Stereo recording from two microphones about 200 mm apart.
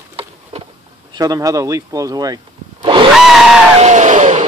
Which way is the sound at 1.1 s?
20° right (ahead or behind).